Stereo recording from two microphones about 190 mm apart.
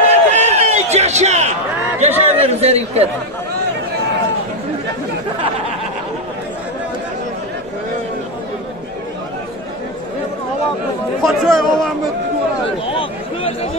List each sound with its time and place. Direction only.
0.1 s a sound: 35° right (ahead or behind)
2.0 s speech: 35° right (ahead or behind)
11.2 s speech: centre (ahead or behind)
12.8 s speech: 30° left (ahead or behind)